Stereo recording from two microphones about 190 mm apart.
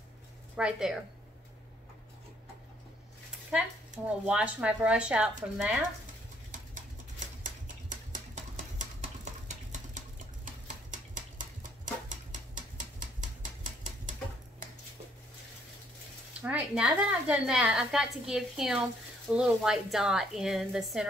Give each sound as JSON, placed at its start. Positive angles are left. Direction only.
{"t": 0.6, "sound": "a woman's voice", "side_deg": -5}
{"t": 3.5, "sound": "speech", "side_deg": -5}
{"t": 6.5, "sound": "typewriter", "side_deg": -40}
{"t": 8.7, "sound": "a sound", "side_deg": -40}
{"t": 16.3, "sound": "a woman's voice", "side_deg": -5}